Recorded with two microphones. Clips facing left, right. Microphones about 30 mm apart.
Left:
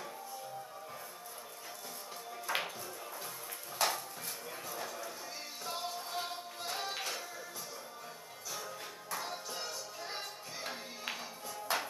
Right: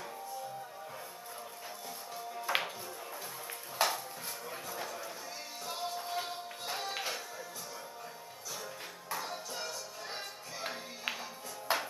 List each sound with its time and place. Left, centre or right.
2.4 s music: centre
3.8 s music: centre
4.5 s a sound: centre
5.7 s music: centre
6.9 s a sound: centre
9.1 s music: centre
10.6 s music: centre
11.7 s music: right